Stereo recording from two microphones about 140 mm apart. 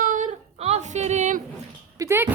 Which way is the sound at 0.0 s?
70° right (ahead or behind).